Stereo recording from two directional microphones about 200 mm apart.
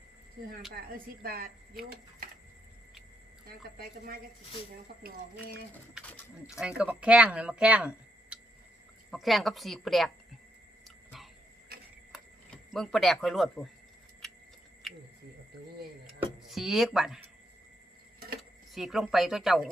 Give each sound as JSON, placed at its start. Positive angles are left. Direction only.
{"t": 1.2, "sound": "a woman's voice", "side_deg": -45}
{"t": 3.4, "sound": "a woman's voice", "side_deg": -45}
{"t": 6.0, "sound": "speech", "side_deg": -5}
{"t": 10.8, "sound": "a sound", "side_deg": 0}
{"t": 14.8, "sound": "a sound", "side_deg": 0}
{"t": 16.0, "sound": "speech", "side_deg": 0}
{"t": 18.7, "sound": "speech", "side_deg": 0}